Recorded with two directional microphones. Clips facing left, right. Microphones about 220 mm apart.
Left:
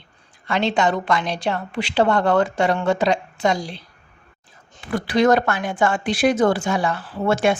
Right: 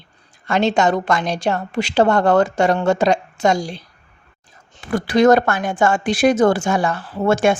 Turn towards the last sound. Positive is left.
turn(degrees=-45)  # may be behind; listen again after turning